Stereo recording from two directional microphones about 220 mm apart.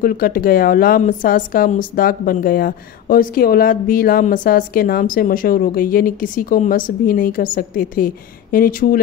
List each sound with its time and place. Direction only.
0.0 s a woman's voice: 40° left (ahead or behind)